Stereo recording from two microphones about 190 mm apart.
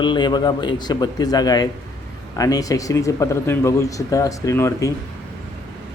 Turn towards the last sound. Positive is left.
turn(degrees=15)  # may be behind; listen again after turning